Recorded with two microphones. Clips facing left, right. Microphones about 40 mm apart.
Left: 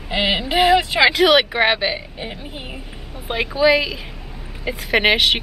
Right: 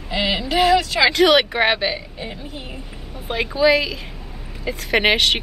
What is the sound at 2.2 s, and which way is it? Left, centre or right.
Speech, left.